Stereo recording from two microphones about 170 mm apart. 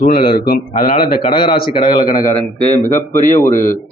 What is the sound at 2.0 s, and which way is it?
A man's voice, 55° left (ahead or behind).